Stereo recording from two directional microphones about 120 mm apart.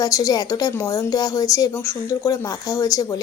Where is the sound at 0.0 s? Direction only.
30° left (ahead or behind).